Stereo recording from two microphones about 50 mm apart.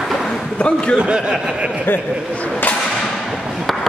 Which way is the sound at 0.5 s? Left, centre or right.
Left.